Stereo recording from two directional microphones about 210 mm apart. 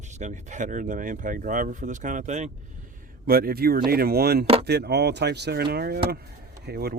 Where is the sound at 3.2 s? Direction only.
45° right (ahead or behind).